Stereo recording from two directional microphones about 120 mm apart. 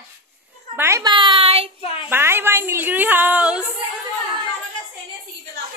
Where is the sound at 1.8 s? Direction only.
50° left (ahead or behind).